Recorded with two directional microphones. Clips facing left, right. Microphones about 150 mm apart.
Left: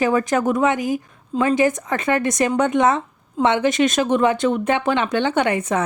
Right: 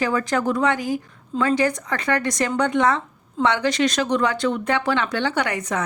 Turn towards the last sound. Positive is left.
turn(degrees=25)  # may be behind; listen again after turning